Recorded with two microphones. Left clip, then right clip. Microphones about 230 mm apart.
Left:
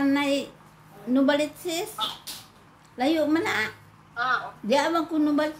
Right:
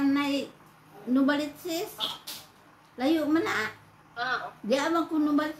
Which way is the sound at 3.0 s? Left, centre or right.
Left.